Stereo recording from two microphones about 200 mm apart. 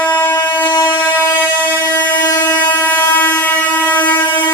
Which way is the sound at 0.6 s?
20° left (ahead or behind).